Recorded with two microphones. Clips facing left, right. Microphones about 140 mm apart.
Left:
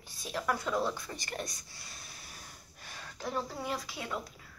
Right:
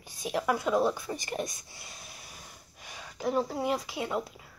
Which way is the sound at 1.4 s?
20° right (ahead or behind).